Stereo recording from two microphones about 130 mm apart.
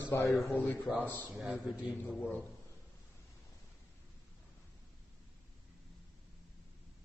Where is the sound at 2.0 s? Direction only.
15° left (ahead or behind).